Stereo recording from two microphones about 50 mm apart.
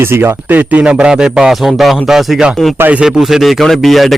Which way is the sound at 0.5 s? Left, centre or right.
Right.